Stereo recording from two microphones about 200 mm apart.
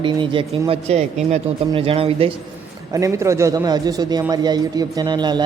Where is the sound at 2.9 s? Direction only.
15° right (ahead or behind).